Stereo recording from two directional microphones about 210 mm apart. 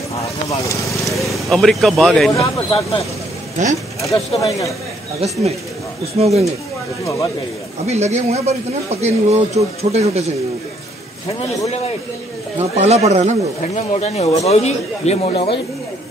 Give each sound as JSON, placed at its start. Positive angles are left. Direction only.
{"t": 0.1, "sound": "vehicle", "side_deg": 15}
{"t": 1.0, "sound": "speech", "side_deg": 0}
{"t": 2.5, "sound": "speech", "side_deg": 25}
{"t": 3.6, "sound": "a man's voice", "side_deg": -35}
{"t": 4.0, "sound": "speech", "side_deg": 15}
{"t": 6.1, "sound": "speech", "side_deg": -30}
{"t": 7.8, "sound": "a man's voice", "side_deg": -30}
{"t": 12.5, "sound": "a man's voice", "side_deg": -30}
{"t": 13.6, "sound": "a man's voice", "side_deg": 35}